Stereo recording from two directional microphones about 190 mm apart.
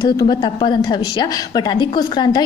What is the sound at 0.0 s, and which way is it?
A woman's voice, 25° left (ahead or behind).